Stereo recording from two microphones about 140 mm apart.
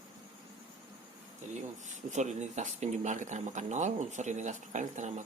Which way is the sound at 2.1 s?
55° right (ahead or behind).